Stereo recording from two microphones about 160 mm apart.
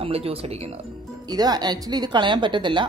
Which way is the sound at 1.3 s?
25° right (ahead or behind).